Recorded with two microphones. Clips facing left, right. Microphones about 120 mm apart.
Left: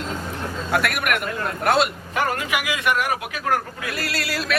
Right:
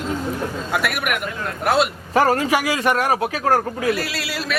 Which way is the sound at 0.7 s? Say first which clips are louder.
Left 2 dB; centre (ahead or behind).